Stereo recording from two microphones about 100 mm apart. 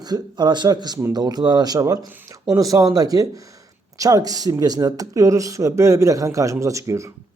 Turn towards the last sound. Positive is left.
turn(degrees=-30)  # may be behind; listen again after turning